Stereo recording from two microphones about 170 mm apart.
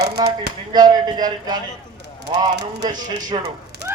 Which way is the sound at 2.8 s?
25° right (ahead or behind).